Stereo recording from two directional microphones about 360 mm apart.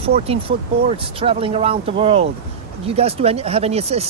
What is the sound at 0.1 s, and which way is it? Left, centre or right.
Speech, centre.